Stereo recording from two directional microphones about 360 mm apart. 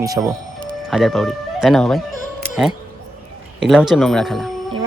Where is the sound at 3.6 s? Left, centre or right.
Centre.